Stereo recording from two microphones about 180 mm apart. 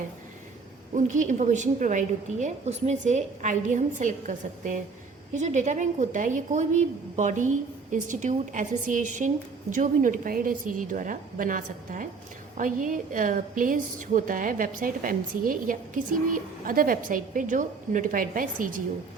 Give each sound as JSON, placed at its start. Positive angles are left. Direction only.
{"t": 0.9, "sound": "a woman's voice", "side_deg": -45}